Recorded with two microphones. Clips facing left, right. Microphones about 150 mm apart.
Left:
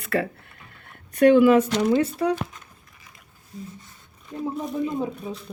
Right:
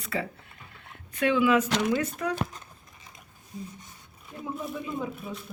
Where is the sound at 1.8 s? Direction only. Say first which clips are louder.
Left 6 dB; 30° left (ahead or behind).